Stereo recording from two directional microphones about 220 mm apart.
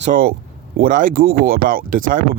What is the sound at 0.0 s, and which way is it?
Speech, 40° right (ahead or behind).